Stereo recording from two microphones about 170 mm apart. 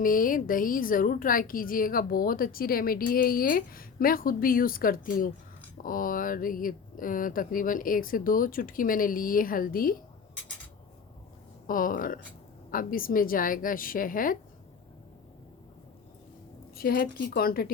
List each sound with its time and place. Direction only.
0.0 s a woman's voice: 55° left (ahead or behind)
11.6 s a woman's voice: 55° left (ahead or behind)
16.7 s a woman's voice: 60° left (ahead or behind)